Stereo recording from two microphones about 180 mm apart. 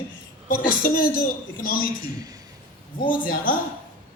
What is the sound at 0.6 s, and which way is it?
A man's voice, 50° left (ahead or behind).